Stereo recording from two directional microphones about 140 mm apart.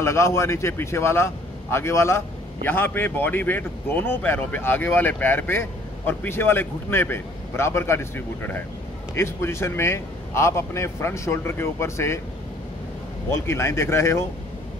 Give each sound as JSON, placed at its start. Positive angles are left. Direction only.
{"t": 0.0, "sound": "a man's voice", "side_deg": 20}
{"t": 13.3, "sound": "a man's voice", "side_deg": 20}